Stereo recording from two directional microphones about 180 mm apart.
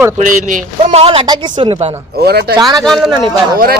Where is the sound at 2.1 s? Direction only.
65° right (ahead or behind).